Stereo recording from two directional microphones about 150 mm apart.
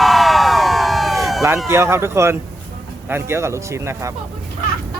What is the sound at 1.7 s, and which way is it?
A man's voice, 15° right (ahead or behind).